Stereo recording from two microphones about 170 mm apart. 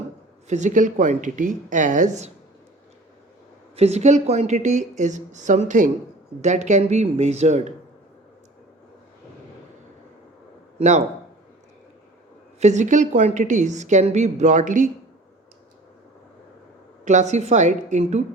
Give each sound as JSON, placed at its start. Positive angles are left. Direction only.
{"t": 0.4, "sound": "a woman's voice", "side_deg": -45}
{"t": 3.8, "sound": "a woman's voice", "side_deg": -40}
{"t": 10.8, "sound": "speech", "side_deg": -40}
{"t": 12.5, "sound": "a woman's voice", "side_deg": -45}
{"t": 17.1, "sound": "a woman's voice", "side_deg": -45}